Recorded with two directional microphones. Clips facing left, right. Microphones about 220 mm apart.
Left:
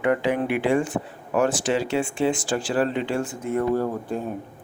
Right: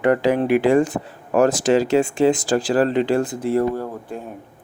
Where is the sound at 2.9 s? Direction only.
90° right.